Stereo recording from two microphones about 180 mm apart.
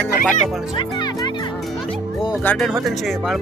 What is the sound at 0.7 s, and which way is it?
Music, 25° left (ahead or behind).